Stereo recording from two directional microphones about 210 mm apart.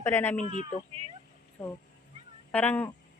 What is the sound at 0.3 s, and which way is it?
Speech, 35° left (ahead or behind).